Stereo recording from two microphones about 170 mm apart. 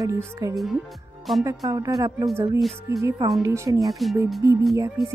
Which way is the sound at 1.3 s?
Centre (ahead or behind).